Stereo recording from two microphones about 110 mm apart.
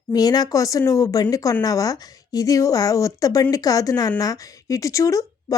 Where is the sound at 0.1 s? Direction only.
35° left (ahead or behind).